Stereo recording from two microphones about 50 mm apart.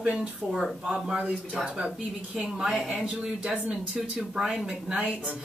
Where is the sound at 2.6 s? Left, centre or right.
Centre.